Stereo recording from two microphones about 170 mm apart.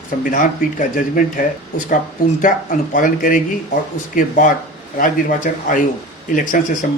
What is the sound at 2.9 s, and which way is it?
Speech, 50° left (ahead or behind).